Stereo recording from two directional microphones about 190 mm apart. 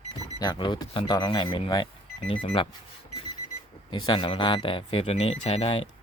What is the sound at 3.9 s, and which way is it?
Speech, 25° left (ahead or behind).